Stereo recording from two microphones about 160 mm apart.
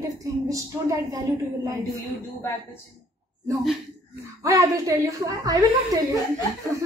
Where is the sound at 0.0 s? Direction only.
20° right (ahead or behind).